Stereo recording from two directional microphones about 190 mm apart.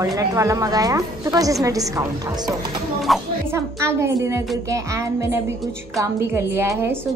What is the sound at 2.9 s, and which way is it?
Speech, centre (ahead or behind).